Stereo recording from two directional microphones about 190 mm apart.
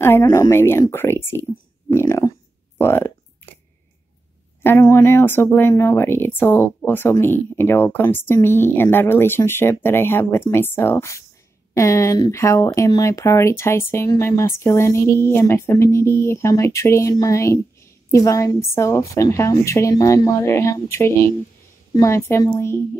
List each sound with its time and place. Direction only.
0.0 s speech: 15° left (ahead or behind)
1.9 s a sound: 15° left (ahead or behind)
4.6 s speech: 15° left (ahead or behind)